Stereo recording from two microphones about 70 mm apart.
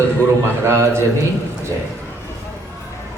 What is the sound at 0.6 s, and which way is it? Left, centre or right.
Speech, right.